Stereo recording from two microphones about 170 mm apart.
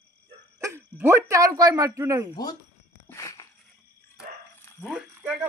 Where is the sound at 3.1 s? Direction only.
20° left (ahead or behind).